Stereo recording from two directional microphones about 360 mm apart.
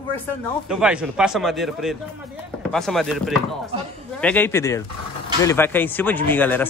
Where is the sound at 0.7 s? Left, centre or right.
Centre.